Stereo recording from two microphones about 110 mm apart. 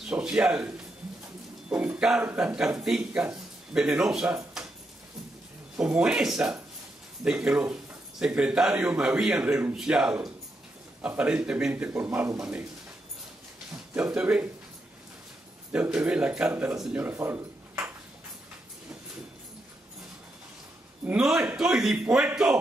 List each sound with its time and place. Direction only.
0.0 s speech: 10° right (ahead or behind)
4.6 s a sound: 5° right (ahead or behind)
5.8 s speech: 10° right (ahead or behind)
13.9 s speech: 15° right (ahead or behind)
15.7 s speech: 10° right (ahead or behind)
17.0 s a sound: 20° right (ahead or behind)
21.1 s speech: 5° right (ahead or behind)